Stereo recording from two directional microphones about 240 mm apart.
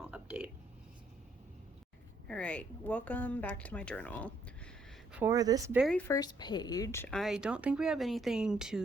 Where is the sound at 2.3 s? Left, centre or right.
Centre.